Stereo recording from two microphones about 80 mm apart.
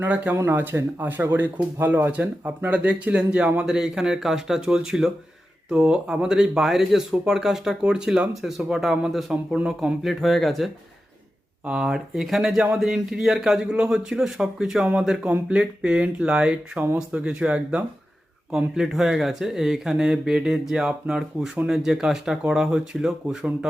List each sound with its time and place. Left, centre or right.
0.0 s speech: centre
11.6 s speech: centre